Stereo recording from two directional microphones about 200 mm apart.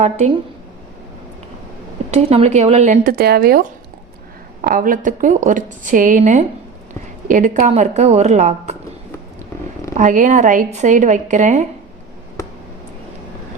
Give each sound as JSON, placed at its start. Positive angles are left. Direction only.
{"t": 2.0, "sound": "a woman's voice", "side_deg": -30}
{"t": 10.0, "sound": "a woman's voice", "side_deg": -40}